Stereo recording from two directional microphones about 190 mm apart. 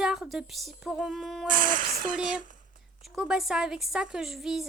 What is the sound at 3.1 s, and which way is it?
Speech, centre (ahead or behind).